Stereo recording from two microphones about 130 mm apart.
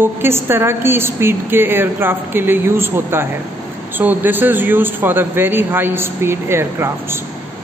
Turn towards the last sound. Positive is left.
turn(degrees=-20)  # may be behind; listen again after turning